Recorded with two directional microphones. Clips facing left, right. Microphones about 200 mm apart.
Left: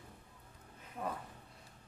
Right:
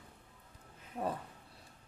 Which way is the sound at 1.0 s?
30° right (ahead or behind).